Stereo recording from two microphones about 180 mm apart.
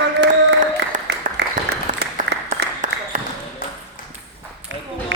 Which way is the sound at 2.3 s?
65° right (ahead or behind).